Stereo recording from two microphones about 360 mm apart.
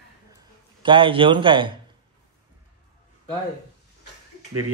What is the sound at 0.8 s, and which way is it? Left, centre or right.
Speech, centre.